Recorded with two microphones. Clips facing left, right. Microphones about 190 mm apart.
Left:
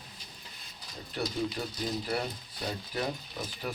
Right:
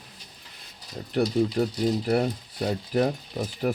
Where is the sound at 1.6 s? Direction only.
55° right (ahead or behind).